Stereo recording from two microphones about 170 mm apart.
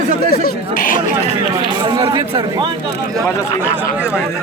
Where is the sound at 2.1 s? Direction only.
35° right (ahead or behind).